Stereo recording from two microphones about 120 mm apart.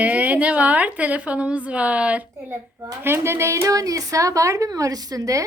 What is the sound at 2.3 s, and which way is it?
A child's voice, 25° right (ahead or behind).